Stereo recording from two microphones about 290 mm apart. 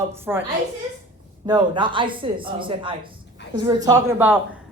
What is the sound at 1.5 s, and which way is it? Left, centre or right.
A woman's voice, centre.